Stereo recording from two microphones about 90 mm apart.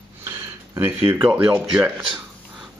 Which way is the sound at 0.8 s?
25° right (ahead or behind).